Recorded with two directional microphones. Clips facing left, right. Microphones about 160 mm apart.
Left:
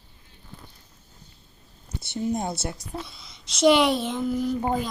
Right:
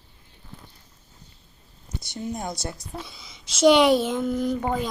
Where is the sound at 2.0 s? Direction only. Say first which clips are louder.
Left 5 dB; 25° left (ahead or behind).